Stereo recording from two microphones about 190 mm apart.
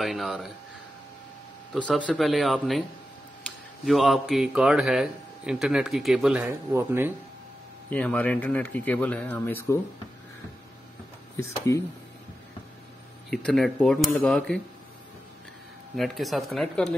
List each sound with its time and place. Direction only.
0.0 s a man's voice: centre (ahead or behind)
1.7 s a man's voice: centre (ahead or behind)
3.8 s a man's voice: centre (ahead or behind)
6.7 s speech: 15° right (ahead or behind)
7.9 s speech: 5° left (ahead or behind)
11.3 s speech: 15° left (ahead or behind)
13.3 s a man's voice: 5° left (ahead or behind)
16.0 s a man's voice: centre (ahead or behind)